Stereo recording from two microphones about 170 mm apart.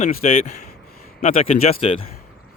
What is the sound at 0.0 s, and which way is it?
Speech, 40° left (ahead or behind).